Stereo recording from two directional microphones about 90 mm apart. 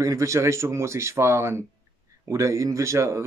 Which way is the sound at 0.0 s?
35° right (ahead or behind).